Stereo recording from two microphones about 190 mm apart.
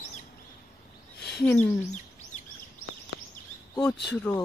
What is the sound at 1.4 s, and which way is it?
Speech, 10° left (ahead or behind).